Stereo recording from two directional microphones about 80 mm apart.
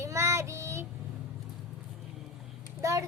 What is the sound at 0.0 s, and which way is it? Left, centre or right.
Child singing, right.